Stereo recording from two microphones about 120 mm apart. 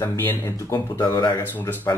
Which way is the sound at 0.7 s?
35° left (ahead or behind).